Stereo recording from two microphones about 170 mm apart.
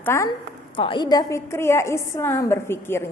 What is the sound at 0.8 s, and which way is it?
A woman's voice, 30° left (ahead or behind).